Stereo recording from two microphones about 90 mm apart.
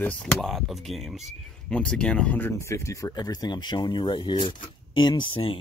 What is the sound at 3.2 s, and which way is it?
Speech, 50° left (ahead or behind).